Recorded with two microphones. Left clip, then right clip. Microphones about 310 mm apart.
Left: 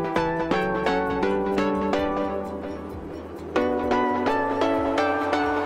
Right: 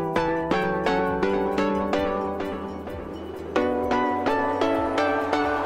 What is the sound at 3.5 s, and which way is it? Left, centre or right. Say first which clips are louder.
Music: even; centre.